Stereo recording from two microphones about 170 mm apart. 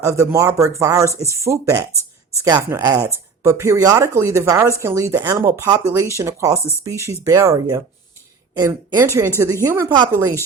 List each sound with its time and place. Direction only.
0.0 s a woman's voice: 15° right (ahead or behind)